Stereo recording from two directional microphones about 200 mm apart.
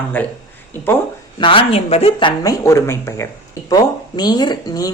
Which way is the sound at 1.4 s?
25° left (ahead or behind).